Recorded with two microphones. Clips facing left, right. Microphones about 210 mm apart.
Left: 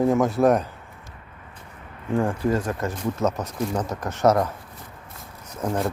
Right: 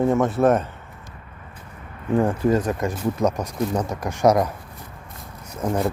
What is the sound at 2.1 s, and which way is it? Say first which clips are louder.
Speech: right 3 dB; 20° right (ahead or behind).